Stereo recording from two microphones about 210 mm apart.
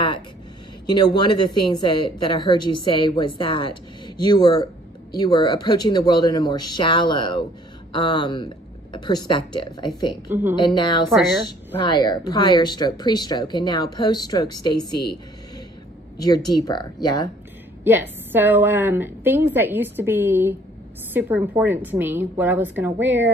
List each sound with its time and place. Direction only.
0.8 s a woman's voice: 20° left (ahead or behind)
16.2 s a woman's voice: 20° left (ahead or behind)
17.8 s a woman's voice: 10° right (ahead or behind)